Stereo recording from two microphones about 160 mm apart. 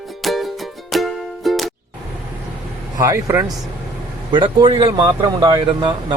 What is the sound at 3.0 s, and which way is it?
Speech, 20° right (ahead or behind).